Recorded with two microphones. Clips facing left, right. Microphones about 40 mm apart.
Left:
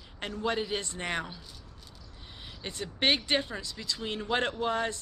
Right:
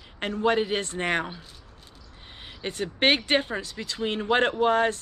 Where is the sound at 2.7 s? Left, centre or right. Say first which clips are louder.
Right 5 dB; right.